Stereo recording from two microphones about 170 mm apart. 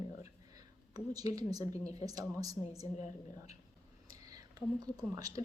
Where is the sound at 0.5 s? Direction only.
20° right (ahead or behind).